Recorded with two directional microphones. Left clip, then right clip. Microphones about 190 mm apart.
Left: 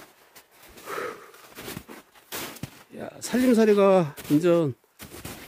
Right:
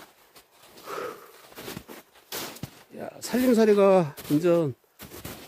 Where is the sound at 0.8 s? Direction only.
25° left (ahead or behind).